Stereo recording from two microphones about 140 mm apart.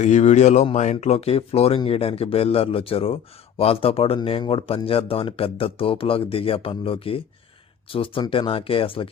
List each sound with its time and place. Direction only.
0.0 s speech: 55° left (ahead or behind); by 9.0 s 40° left (ahead or behind)